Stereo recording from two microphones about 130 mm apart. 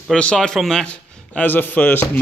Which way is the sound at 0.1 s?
5° left (ahead or behind).